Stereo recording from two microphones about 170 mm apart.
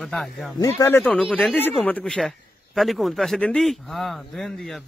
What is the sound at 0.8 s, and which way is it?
A man's voice, 10° left (ahead or behind).